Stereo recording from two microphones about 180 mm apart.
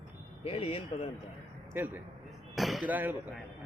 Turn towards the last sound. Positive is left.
turn(degrees=-10)  # may be behind; listen again after turning